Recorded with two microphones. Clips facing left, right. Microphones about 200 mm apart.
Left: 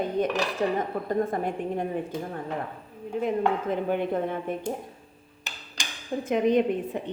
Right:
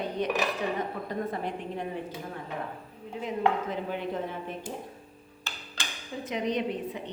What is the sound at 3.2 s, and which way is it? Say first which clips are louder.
Speech: left 3 dB; 55° left (ahead or behind).